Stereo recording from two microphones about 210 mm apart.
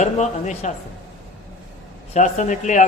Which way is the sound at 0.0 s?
35° left (ahead or behind).